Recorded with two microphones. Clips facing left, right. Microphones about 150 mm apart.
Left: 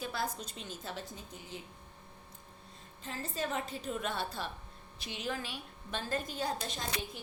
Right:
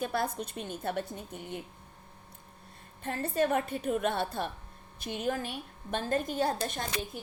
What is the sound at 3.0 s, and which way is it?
A woman's voice, 60° right (ahead or behind).